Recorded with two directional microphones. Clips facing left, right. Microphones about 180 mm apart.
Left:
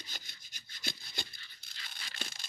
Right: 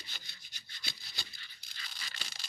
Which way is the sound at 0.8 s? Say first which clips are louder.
Left 7 dB; 50° left (ahead or behind).